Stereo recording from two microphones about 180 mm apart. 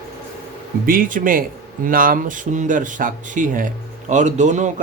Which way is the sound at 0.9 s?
50° right (ahead or behind).